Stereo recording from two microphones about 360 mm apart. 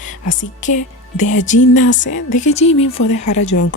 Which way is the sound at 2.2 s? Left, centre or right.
Left.